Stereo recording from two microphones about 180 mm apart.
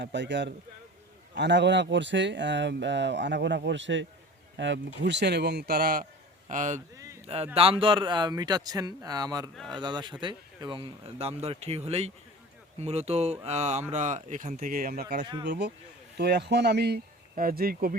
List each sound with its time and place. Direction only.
0.0 s speech: 75° right (ahead or behind); by 4.8 s 90° right
5.0 s speech: 70° right (ahead or behind); by 6.1 s 55° right (ahead or behind)
6.5 s speech: 45° right (ahead or behind)
7.5 s speech: 30° right (ahead or behind); by 17.9 s 55° right (ahead or behind)